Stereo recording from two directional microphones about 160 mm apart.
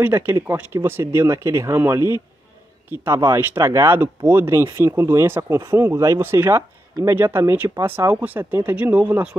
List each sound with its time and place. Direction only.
0.0 s speech: 15° right (ahead or behind)